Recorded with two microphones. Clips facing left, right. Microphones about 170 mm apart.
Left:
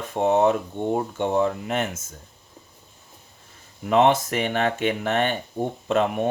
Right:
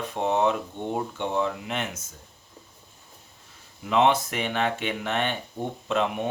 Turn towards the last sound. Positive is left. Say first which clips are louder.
# left 4 dB
turn(degrees=50)  # may be behind; listen again after turning